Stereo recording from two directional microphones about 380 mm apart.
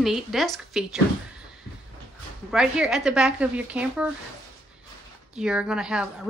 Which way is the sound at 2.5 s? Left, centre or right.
Centre.